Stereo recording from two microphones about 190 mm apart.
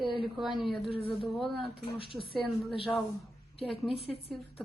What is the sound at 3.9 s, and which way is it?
Speech, 30° left (ahead or behind).